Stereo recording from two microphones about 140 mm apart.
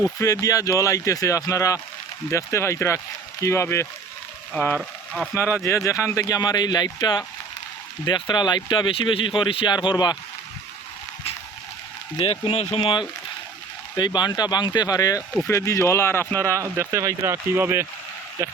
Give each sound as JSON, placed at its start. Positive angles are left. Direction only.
{"t": 0.0, "sound": "speech", "side_deg": 25}
{"t": 12.1, "sound": "speech", "side_deg": 40}
{"t": 12.8, "sound": "speech", "side_deg": 35}
{"t": 16.6, "sound": "speech", "side_deg": -20}